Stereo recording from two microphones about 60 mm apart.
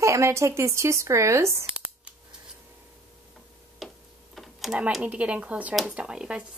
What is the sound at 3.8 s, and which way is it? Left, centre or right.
Tick-tock, centre.